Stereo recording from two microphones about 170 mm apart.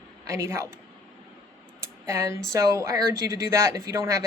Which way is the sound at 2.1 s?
15° right (ahead or behind).